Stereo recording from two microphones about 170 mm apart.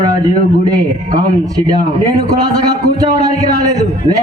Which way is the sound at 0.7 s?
25° right (ahead or behind).